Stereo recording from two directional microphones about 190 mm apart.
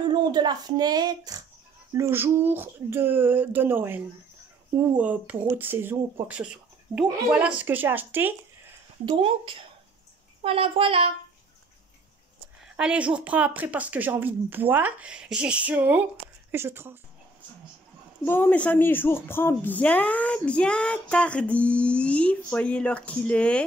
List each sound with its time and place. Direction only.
0.1 s a woman's voice: 20° right (ahead or behind)
9.1 s speech: 30° right (ahead or behind)
12.7 s a woman's voice: 5° right (ahead or behind)
18.2 s speech: 10° left (ahead or behind)